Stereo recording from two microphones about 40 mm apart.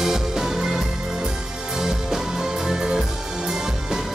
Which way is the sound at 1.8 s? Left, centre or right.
Centre.